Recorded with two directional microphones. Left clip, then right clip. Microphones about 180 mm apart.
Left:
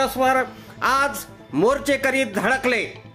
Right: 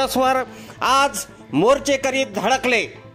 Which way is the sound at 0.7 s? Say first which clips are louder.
Right 3 dB; 30° right (ahead or behind).